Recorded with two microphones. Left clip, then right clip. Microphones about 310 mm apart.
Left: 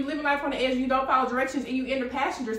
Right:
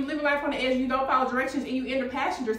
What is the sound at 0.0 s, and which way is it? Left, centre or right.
A woman's voice, centre.